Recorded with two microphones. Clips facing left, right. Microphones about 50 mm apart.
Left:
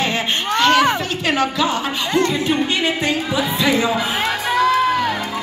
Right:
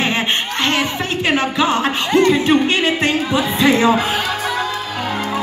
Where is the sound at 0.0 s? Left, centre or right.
Right.